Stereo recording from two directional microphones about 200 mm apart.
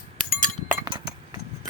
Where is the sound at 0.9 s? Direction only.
20° right (ahead or behind).